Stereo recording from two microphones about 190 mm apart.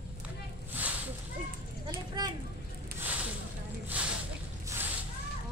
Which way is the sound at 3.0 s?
10° right (ahead or behind).